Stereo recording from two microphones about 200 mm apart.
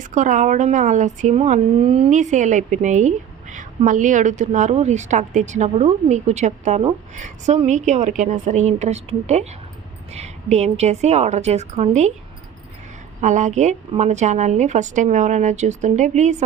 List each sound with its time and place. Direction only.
0.0 s a woman's voice: 40° right (ahead or behind)
13.2 s a woman's voice: 35° right (ahead or behind)